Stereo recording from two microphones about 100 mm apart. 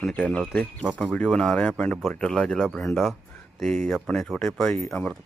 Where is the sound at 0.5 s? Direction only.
15° left (ahead or behind).